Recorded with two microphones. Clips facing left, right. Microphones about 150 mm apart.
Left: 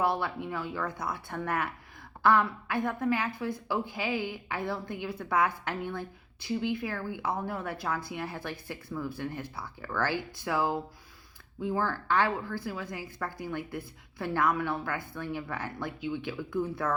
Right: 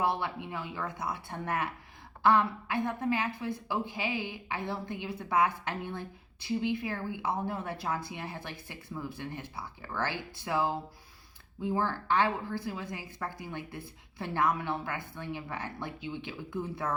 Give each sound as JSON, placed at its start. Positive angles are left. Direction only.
{"t": 0.0, "sound": "a woman's voice", "side_deg": -20}
{"t": 11.6, "sound": "a woman's voice", "side_deg": -20}